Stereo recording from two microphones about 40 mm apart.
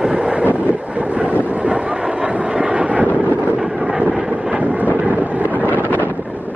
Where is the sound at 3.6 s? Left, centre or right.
Centre.